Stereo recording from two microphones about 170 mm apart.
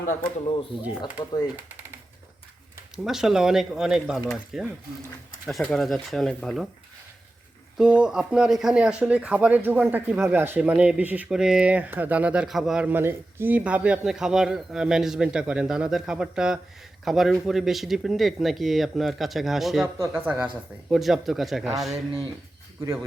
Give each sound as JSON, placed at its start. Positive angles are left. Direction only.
{"t": 1.0, "sound": "speech", "side_deg": 25}
{"t": 2.9, "sound": "speech", "side_deg": -5}
{"t": 7.8, "sound": "speech", "side_deg": -5}